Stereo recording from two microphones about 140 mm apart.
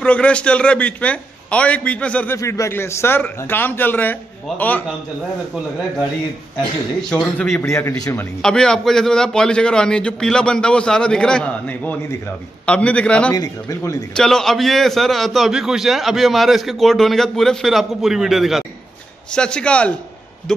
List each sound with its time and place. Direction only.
0.0 s a man's voice: 10° left (ahead or behind)
2.3 s a man's voice: 20° left (ahead or behind)
7.0 s a man's voice: 5° left (ahead or behind)
7.6 s a man's voice: 20° left (ahead or behind)
8.4 s a man's voice: 5° left (ahead or behind)
13.3 s a man's voice: 25° left (ahead or behind)
14.1 s a man's voice: 5° left (ahead or behind)